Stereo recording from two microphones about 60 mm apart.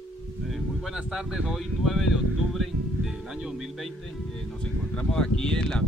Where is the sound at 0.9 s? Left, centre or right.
Centre.